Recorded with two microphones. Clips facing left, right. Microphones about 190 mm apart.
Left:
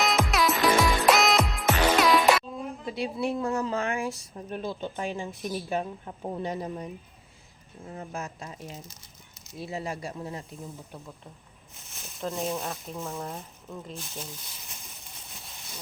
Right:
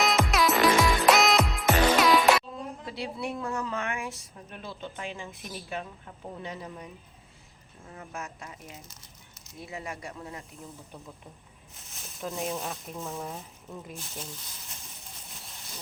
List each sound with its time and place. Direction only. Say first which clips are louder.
0.0 s music: even; centre (ahead or behind)
2.8 s a woman's voice: left 6 dB; 20° left (ahead or behind)
12.2 s speech: left 2 dB; 5° right (ahead or behind)